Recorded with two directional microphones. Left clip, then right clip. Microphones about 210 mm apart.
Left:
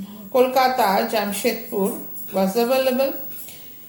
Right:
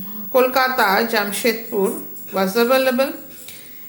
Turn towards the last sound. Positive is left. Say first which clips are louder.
# right 3 dB
turn(degrees=-20)  # may be behind; listen again after turning